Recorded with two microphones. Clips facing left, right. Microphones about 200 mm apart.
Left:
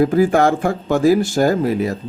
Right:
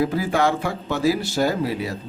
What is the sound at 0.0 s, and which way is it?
Speech, 50° left (ahead or behind).